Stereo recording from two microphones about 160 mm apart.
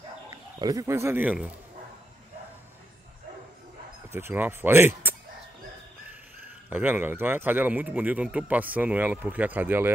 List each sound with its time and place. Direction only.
0.3 s speech: 25° right (ahead or behind)
4.1 s speech: 15° right (ahead or behind)
6.7 s speech: 10° right (ahead or behind)